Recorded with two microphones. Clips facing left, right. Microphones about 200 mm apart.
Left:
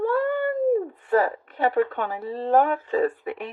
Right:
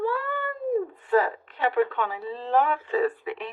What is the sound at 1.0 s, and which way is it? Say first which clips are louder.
A woman's voice: left 1 dB; 45° left (ahead or behind).